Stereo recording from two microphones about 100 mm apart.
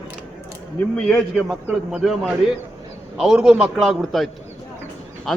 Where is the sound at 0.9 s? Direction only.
5° left (ahead or behind).